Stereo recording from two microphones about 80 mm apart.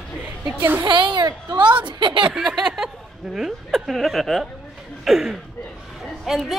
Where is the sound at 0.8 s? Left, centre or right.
Right.